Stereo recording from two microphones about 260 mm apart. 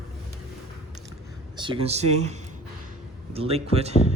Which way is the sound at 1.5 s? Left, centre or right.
Centre.